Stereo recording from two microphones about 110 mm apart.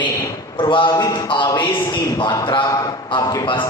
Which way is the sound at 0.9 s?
35° left (ahead or behind).